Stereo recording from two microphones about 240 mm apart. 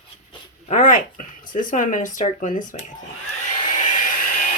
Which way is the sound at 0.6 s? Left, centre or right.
Left.